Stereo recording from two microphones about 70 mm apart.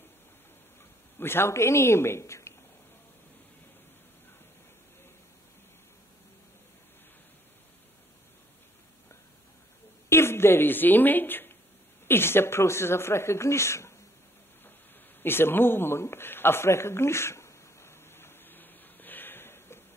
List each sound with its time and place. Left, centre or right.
1.1 s speech: left
10.0 s speech: left
15.2 s a sound: left